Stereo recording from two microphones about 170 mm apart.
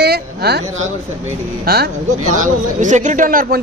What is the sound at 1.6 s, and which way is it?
Speech, 65° right (ahead or behind).